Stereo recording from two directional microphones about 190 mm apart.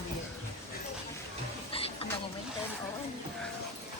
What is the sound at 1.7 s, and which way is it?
Music, 30° left (ahead or behind).